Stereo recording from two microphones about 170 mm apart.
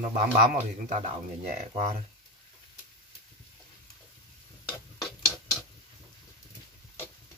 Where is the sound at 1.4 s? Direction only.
45° right (ahead or behind).